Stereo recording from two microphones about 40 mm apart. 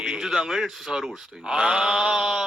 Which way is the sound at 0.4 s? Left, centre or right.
Centre.